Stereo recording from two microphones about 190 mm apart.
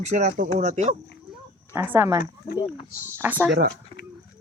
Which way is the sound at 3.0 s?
10° right (ahead or behind).